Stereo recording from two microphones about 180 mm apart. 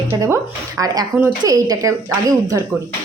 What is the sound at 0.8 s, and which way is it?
A woman's voice, 15° right (ahead or behind).